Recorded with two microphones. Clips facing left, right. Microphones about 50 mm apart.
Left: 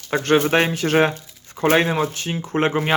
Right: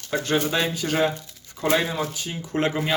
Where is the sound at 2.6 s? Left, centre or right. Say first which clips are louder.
Left 4 dB; left.